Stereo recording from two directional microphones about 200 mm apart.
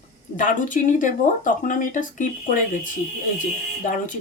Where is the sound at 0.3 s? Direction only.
40° left (ahead or behind).